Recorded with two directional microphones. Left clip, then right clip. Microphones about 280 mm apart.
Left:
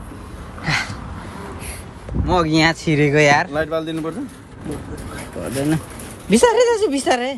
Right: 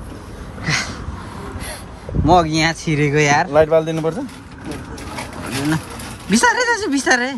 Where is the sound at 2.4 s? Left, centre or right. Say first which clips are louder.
Left 2 dB; centre.